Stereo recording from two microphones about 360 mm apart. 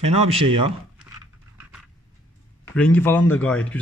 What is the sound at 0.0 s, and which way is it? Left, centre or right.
Speech, centre.